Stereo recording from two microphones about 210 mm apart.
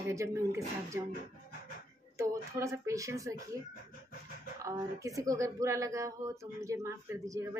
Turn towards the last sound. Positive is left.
turn(degrees=-15)  # may be behind; listen again after turning